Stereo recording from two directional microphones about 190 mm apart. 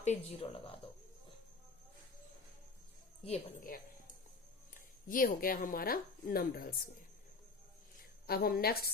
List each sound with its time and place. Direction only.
0.0 s speech: 35° left (ahead or behind)
3.6 s a sound: 45° left (ahead or behind)
5.0 s speech: 45° left (ahead or behind)
8.3 s speech: 55° left (ahead or behind)